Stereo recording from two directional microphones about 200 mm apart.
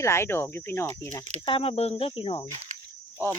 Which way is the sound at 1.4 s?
25° left (ahead or behind).